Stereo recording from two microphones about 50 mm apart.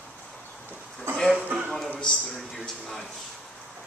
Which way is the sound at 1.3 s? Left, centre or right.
Right.